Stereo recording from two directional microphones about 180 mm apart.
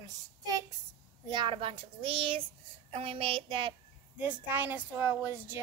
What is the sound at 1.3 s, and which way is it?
Speech, 25° right (ahead or behind).